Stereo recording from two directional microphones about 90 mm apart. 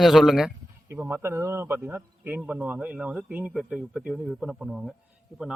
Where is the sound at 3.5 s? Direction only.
5° right (ahead or behind).